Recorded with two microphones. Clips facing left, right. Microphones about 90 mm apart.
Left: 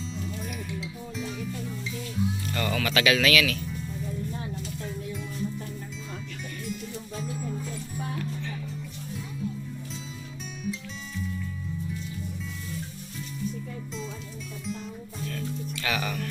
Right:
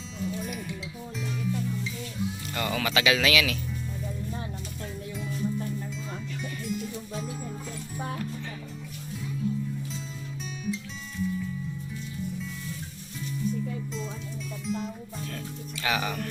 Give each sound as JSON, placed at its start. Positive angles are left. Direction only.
{"t": 0.4, "sound": "music", "side_deg": 0}
{"t": 2.6, "sound": "speech", "side_deg": -20}
{"t": 10.6, "sound": "music", "side_deg": 0}
{"t": 14.6, "sound": "music", "side_deg": 0}
{"t": 15.8, "sound": "music", "side_deg": -20}